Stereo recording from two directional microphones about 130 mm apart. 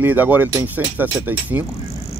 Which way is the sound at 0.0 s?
15° right (ahead or behind).